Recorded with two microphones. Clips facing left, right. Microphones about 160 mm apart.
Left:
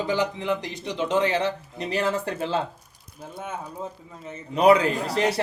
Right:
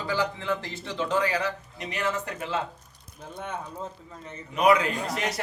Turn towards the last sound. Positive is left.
turn(degrees=30)  # may be behind; listen again after turning